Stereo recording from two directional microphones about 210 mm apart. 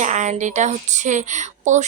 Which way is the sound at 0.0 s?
35° right (ahead or behind).